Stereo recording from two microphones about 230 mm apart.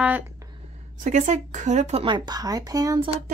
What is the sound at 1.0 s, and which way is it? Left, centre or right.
Speech, right.